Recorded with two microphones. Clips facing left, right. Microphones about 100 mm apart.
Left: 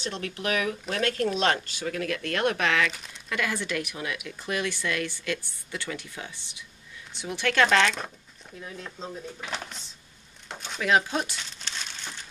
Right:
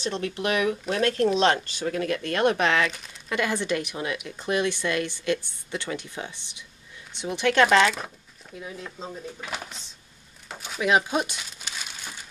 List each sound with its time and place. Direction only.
0.0 s speech: 20° right (ahead or behind)
2.9 s speech: centre (ahead or behind)
3.3 s speech: 25° right (ahead or behind); by 9.8 s 5° right (ahead or behind)
10.5 s a sound: 5° right (ahead or behind)
10.8 s crumpling: 15° right (ahead or behind)